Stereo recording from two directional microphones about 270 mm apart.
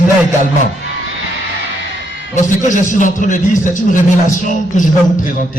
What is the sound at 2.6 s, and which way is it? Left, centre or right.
A man's voice, left.